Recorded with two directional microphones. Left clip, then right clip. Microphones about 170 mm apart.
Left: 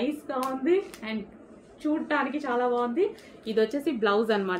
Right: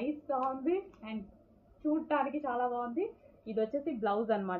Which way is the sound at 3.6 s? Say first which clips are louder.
Left 8 dB; 35° left (ahead or behind).